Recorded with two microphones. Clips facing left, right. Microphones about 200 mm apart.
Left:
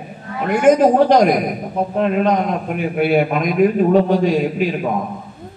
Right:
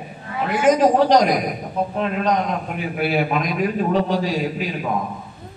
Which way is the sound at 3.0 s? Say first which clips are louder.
Left 5 dB; 50° left (ahead or behind).